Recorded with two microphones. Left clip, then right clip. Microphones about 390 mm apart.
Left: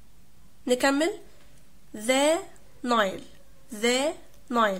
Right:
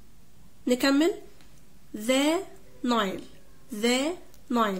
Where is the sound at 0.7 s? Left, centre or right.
Left.